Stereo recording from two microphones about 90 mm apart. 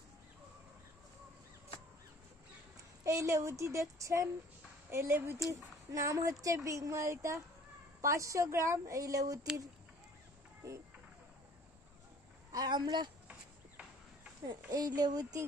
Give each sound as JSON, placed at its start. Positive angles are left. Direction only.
{"t": 3.0, "sound": "a woman's voice", "side_deg": -35}
{"t": 12.5, "sound": "speech", "side_deg": -50}
{"t": 14.7, "sound": "speech", "side_deg": -50}